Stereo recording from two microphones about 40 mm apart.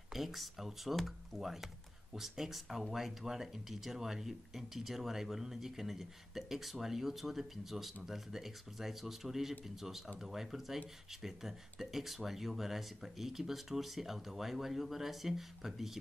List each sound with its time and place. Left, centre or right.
0.1 s speech: centre
1.4 s speech: centre